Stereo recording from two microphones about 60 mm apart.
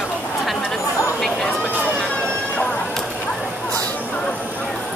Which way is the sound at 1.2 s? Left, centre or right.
Centre.